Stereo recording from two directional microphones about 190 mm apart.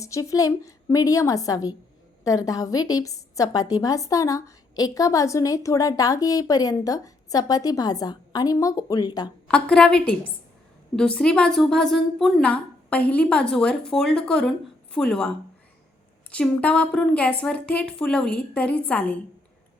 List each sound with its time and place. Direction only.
0.0 s a woman's voice: 15° left (ahead or behind)
9.5 s a woman's voice: 5° left (ahead or behind)
16.3 s a woman's voice: 5° left (ahead or behind)